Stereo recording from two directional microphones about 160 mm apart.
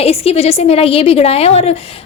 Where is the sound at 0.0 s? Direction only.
40° left (ahead or behind).